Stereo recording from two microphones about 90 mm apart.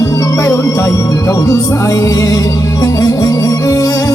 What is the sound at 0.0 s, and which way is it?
Music, 35° left (ahead or behind).